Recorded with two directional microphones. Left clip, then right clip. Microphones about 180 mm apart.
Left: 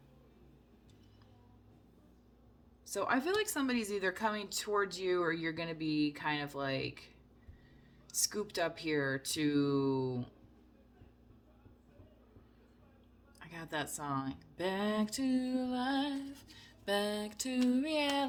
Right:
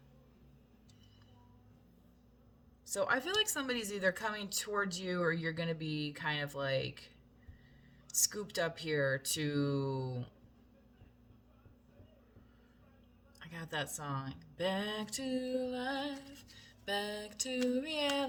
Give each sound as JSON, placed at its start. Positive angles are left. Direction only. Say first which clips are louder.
{"t": 3.0, "sound": "speech", "louder": "even", "side_deg": 30}
{"t": 8.2, "sound": "speech", "louder": "even", "side_deg": 35}
{"t": 13.4, "sound": "speech", "louder": "even", "side_deg": 35}